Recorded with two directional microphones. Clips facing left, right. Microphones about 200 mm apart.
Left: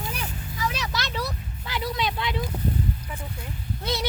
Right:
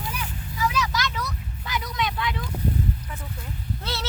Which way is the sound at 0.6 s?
35° left (ahead or behind).